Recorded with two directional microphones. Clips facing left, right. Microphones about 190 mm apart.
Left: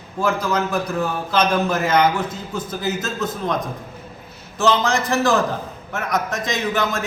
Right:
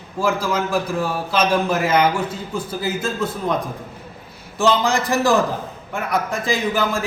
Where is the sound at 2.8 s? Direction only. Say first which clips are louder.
Right 1 dB; 30° right (ahead or behind).